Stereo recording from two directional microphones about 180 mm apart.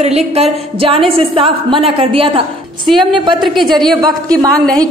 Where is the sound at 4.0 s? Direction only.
20° right (ahead or behind).